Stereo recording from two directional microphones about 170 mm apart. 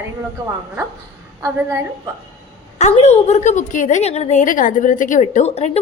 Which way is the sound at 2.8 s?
40° left (ahead or behind).